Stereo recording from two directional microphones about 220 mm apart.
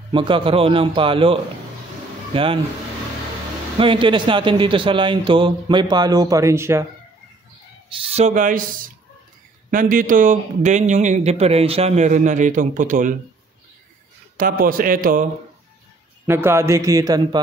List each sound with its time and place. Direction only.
0.1 s a man's voice: 20° right (ahead or behind)
3.7 s a man's voice: 25° right (ahead or behind)
7.9 s speech: 25° right (ahead or behind)
14.3 s speech: 40° right (ahead or behind)
16.3 s speech: 10° right (ahead or behind)